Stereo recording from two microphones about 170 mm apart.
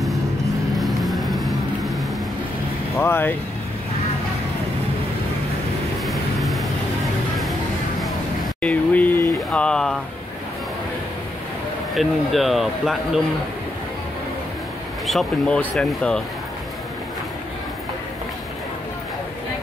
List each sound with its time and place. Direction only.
0.7 s vehicle: centre (ahead or behind)
3.0 s speech: 10° left (ahead or behind)
6.0 s vehicle: centre (ahead or behind)
8.0 s a sound: 5° left (ahead or behind)
11.9 s speech: centre (ahead or behind)
15.0 s speech: 5° left (ahead or behind)